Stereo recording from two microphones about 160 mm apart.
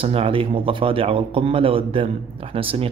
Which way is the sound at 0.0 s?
35° right (ahead or behind).